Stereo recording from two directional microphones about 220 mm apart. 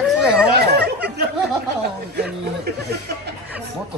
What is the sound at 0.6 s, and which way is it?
Chatter, 45° right (ahead or behind).